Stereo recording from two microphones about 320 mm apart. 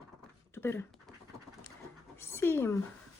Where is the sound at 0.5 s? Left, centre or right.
Centre.